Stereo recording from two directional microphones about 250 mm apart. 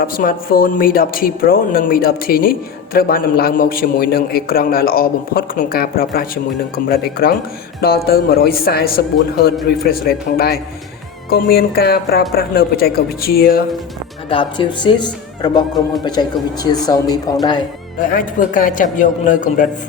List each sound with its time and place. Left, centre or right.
0.0 s speech: left
14.3 s speech: centre
18.1 s speech: left